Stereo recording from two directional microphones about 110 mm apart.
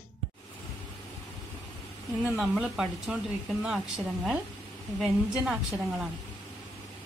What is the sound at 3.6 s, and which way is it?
A woman's voice, 5° right (ahead or behind).